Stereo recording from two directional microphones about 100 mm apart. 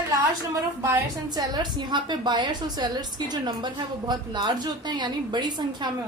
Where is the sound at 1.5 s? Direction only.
50° right (ahead or behind).